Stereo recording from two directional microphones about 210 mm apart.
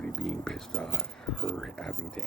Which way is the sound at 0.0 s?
5° left (ahead or behind).